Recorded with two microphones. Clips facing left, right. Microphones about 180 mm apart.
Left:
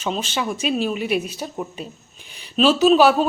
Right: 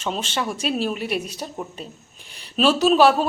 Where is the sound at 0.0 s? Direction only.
5° left (ahead or behind).